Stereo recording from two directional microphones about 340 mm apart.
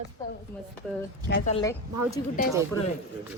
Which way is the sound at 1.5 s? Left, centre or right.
Centre.